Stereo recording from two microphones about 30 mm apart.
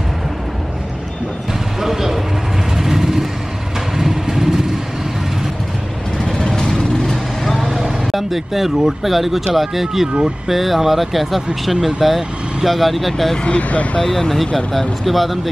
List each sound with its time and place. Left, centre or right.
1.5 s a sound: centre
2.8 s vehicle: centre
6.1 s vehicle: left
8.1 s speech: centre
13.6 s speech: left
14.0 s speech: centre